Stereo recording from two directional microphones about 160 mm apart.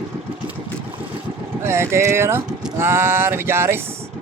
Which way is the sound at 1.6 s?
15° right (ahead or behind).